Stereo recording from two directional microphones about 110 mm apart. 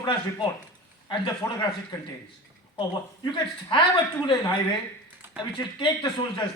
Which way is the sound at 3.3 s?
45° left (ahead or behind).